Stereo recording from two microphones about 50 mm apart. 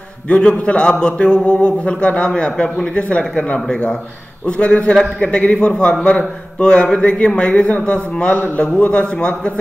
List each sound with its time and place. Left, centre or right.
0.3 s speech: left
3.5 s speech: centre